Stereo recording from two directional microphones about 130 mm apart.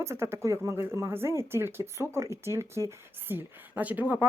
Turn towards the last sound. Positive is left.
turn(degrees=-15)  # may be behind; listen again after turning